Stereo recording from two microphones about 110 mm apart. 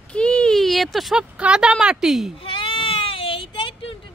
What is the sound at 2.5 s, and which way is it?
Baby cry, 50° left (ahead or behind).